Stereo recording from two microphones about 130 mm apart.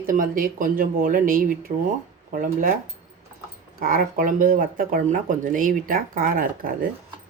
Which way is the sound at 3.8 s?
90° right.